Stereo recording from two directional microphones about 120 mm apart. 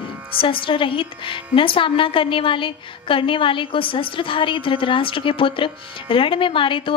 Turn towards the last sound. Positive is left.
turn(degrees=45)  # may be behind; listen again after turning